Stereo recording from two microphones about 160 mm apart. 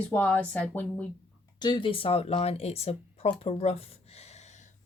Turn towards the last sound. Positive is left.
turn(degrees=40)  # may be behind; listen again after turning